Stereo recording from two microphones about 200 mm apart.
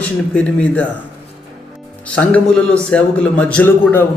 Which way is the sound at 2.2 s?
5° left (ahead or behind).